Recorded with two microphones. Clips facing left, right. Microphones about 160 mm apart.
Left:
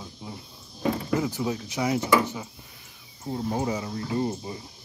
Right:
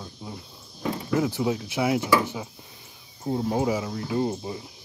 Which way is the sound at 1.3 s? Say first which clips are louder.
Right 3 dB; 10° right (ahead or behind).